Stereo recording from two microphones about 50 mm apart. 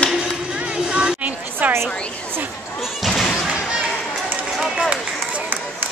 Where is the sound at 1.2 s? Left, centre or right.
Right.